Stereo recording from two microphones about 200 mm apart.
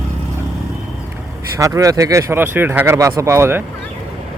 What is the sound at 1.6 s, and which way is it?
Speech, 15° right (ahead or behind).